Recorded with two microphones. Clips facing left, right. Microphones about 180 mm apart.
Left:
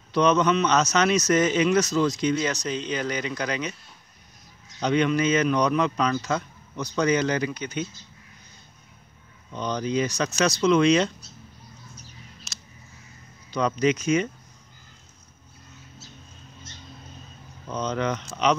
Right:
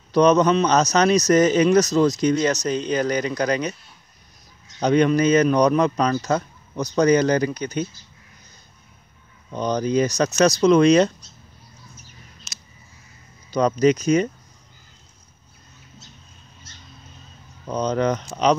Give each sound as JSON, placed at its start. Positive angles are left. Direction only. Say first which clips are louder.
{"t": 0.1, "sound": "a man's voice", "louder": "right 5 dB", "side_deg": -40}
{"t": 4.7, "sound": "a man's voice", "louder": "right 5 dB", "side_deg": -40}
{"t": 9.5, "sound": "a man's voice", "louder": "right 5 dB", "side_deg": -45}
{"t": 12.5, "sound": "a sound", "louder": "left 1 dB", "side_deg": 0}
{"t": 13.5, "sound": "a man's voice", "louder": "right 5 dB", "side_deg": -40}
{"t": 17.6, "sound": "a man's voice", "louder": "right 5 dB", "side_deg": -40}